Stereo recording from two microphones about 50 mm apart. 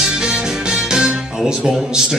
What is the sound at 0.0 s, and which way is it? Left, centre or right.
Music, centre.